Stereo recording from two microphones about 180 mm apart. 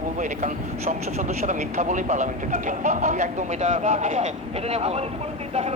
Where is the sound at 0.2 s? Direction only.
45° right (ahead or behind).